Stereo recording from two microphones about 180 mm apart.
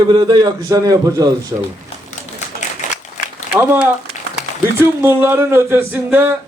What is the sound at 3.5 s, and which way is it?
A man's voice, 10° right (ahead or behind).